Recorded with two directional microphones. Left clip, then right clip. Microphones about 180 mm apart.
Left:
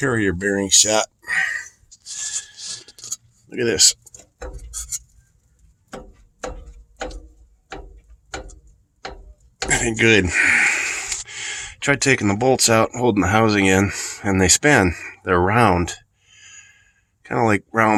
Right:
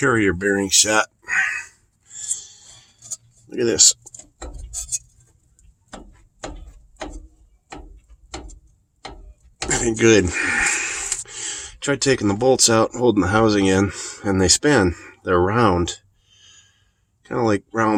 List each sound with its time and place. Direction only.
0.0 s speech: 5° left (ahead or behind)
3.5 s speech: 5° left (ahead or behind)
9.6 s speech: 10° left (ahead or behind)
17.2 s speech: 20° left (ahead or behind)